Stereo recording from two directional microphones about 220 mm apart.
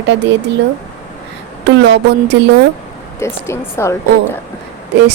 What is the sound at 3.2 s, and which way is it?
A woman's voice, 10° left (ahead or behind).